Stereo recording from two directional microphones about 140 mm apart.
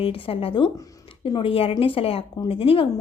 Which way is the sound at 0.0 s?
40° left (ahead or behind).